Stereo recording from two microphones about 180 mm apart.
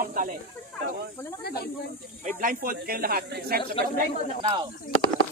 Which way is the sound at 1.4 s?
60° left (ahead or behind).